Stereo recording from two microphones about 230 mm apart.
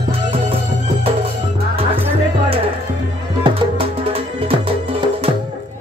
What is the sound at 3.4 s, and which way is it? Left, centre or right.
Music, right.